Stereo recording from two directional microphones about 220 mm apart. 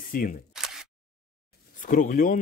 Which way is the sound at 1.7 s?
35° left (ahead or behind).